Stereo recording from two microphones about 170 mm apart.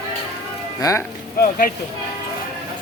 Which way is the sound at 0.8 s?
20° left (ahead or behind).